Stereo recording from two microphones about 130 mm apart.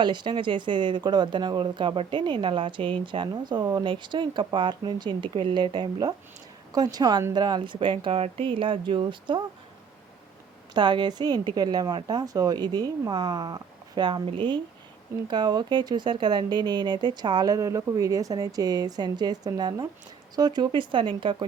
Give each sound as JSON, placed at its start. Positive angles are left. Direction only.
{"t": 0.0, "sound": "speech", "side_deg": -35}
{"t": 10.8, "sound": "speech", "side_deg": -35}